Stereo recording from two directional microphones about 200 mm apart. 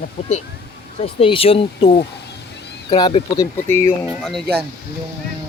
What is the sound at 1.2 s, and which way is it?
Speech, 25° left (ahead or behind).